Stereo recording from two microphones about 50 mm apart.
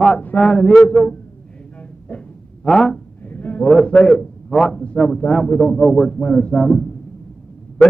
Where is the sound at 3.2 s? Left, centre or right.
Left.